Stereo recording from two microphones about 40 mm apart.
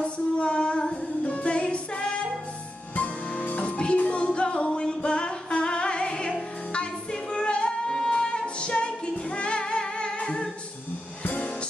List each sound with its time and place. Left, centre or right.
0.0 s female singing: left
1.2 s music: left
3.3 s music: left
11.2 s music: left